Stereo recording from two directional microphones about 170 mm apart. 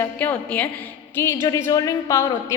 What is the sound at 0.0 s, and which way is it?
A woman's voice, 10° left (ahead or behind).